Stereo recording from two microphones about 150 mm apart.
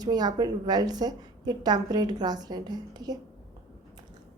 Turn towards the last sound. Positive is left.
turn(degrees=-25)  # may be behind; listen again after turning